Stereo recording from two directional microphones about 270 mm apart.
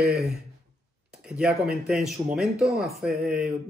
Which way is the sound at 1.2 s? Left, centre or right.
Centre.